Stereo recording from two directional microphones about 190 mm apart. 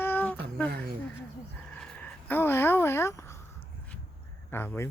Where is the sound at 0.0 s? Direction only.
10° left (ahead or behind).